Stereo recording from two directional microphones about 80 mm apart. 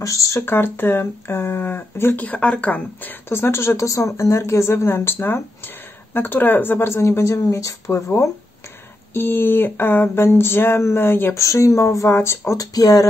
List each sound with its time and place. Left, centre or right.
0.0 s speech: left
0.5 s speech: left
9.1 s speech: left
11.4 s speech: left
12.5 s speech: left